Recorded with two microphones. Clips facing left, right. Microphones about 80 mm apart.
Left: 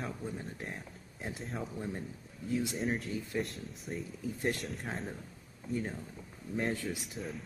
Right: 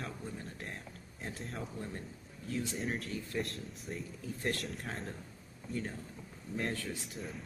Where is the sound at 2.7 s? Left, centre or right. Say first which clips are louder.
Left 3 dB; centre.